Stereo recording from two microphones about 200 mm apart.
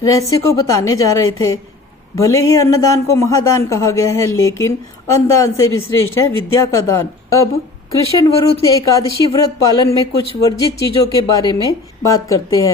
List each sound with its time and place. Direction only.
0.0 s speech: 15° left (ahead or behind)
8.7 s speech: 15° left (ahead or behind)